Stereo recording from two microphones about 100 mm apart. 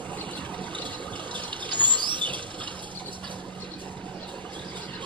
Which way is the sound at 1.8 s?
50° right (ahead or behind).